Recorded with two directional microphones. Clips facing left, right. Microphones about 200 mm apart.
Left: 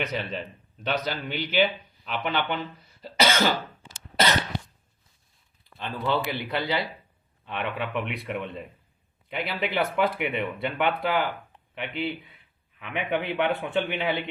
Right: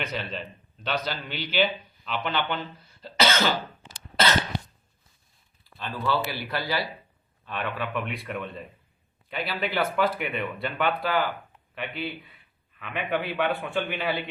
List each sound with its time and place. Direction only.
0.0 s speech: 15° left (ahead or behind)
1.1 s a man's voice: 50° left (ahead or behind)
2.0 s speech: 10° left (ahead or behind)
3.0 s cough: 15° left (ahead or behind)
5.6 s speech: 20° left (ahead or behind)